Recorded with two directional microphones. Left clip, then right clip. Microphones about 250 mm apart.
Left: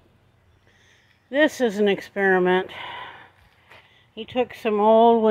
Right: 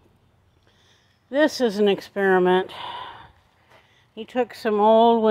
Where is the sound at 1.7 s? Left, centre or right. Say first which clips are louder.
Right 1 dB; centre.